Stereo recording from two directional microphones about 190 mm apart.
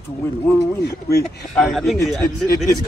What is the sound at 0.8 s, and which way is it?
Speech, 55° left (ahead or behind).